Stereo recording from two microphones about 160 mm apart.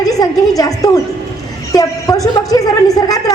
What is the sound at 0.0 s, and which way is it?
A woman's voice, 20° left (ahead or behind).